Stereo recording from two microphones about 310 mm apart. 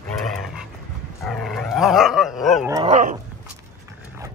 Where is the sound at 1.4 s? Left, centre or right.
Centre.